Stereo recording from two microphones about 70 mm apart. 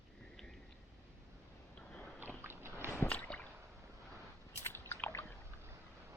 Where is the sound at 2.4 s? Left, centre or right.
Right.